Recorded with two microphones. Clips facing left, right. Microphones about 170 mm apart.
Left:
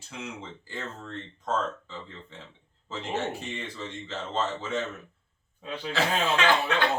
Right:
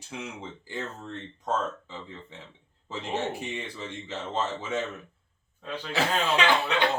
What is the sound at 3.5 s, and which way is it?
Speech, 10° right (ahead or behind).